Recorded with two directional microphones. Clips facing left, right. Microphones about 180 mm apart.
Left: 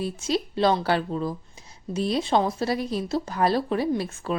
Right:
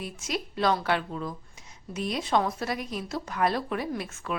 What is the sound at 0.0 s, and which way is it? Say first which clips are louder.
A woman's voice: left 7 dB; 30° left (ahead or behind).